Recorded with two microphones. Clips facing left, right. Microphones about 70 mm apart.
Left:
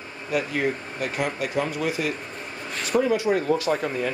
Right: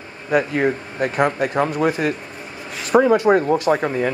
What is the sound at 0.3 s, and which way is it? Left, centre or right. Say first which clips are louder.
Speech: right 7 dB; right.